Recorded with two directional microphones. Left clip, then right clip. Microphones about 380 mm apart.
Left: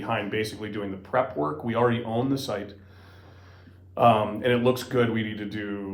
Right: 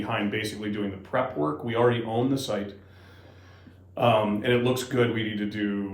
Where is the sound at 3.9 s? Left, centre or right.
Centre.